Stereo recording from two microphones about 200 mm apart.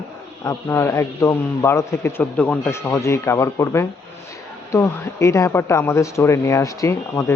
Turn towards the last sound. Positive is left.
turn(degrees=15)  # may be behind; listen again after turning